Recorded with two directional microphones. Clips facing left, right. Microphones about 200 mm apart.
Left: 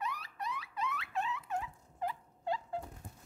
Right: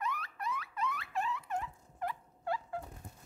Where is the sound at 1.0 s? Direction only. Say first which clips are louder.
Right 1 dB; centre (ahead or behind).